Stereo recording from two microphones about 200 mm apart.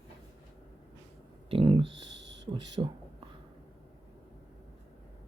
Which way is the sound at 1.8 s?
65° right (ahead or behind).